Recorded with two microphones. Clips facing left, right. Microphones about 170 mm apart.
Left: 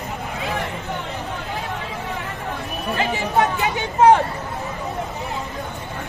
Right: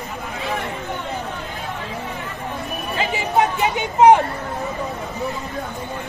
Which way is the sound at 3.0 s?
15° right (ahead or behind).